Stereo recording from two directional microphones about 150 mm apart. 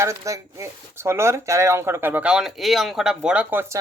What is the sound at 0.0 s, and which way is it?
Speech, 20° right (ahead or behind).